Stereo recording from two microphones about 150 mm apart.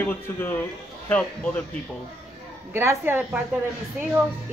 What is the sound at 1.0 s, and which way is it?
Speech, 10° left (ahead or behind).